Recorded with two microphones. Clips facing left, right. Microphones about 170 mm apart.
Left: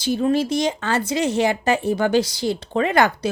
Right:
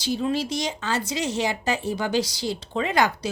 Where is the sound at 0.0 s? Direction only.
50° left (ahead or behind).